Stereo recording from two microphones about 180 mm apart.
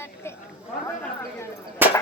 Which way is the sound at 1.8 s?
10° right (ahead or behind).